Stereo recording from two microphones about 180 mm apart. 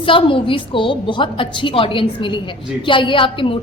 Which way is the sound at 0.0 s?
30° left (ahead or behind).